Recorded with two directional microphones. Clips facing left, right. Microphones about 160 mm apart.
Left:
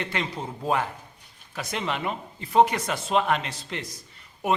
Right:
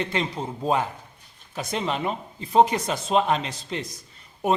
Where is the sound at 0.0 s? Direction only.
25° right (ahead or behind).